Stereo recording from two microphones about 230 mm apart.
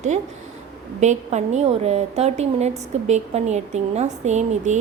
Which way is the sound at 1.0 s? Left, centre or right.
Right.